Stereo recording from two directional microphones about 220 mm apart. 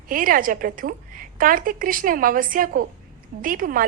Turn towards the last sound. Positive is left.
turn(degrees=-40)  # may be behind; listen again after turning